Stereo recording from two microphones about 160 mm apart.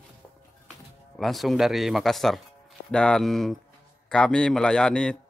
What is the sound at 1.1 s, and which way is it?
A man's voice, centre (ahead or behind).